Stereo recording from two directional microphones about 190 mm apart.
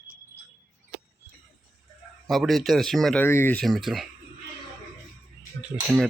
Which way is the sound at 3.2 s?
10° left (ahead or behind).